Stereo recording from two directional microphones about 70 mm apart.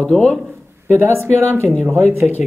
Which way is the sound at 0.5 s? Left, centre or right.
Right.